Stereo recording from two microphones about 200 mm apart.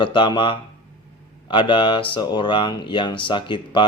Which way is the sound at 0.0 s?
25° left (ahead or behind).